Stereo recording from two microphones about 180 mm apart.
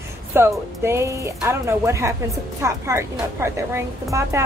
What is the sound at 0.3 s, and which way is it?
Speech, 15° right (ahead or behind).